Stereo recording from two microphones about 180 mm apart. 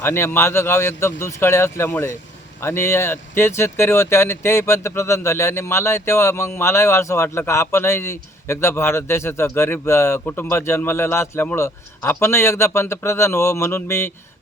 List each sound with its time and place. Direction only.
0.0 s speech: 15° left (ahead or behind)